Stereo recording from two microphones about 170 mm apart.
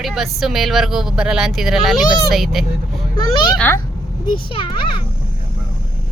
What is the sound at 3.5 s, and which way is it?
Speech, 10° left (ahead or behind).